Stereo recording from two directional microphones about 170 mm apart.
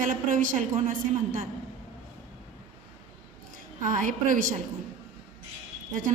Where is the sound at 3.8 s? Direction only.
50° right (ahead or behind).